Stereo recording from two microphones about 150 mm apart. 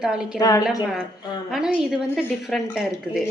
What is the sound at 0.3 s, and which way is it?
Speech, 25° left (ahead or behind).